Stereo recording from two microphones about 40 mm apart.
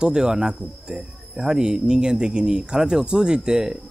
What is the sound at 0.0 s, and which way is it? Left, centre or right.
Speech, centre.